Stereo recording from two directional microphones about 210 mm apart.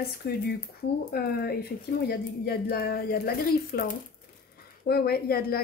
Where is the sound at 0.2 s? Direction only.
50° left (ahead or behind).